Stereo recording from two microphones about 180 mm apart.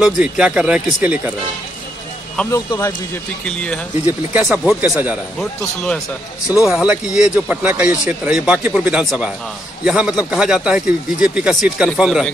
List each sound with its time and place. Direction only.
0.0 s speech: 5° right (ahead or behind)
2.5 s speech: 15° left (ahead or behind)
3.4 s speech: 5° left (ahead or behind)
4.0 s speech: 10° right (ahead or behind)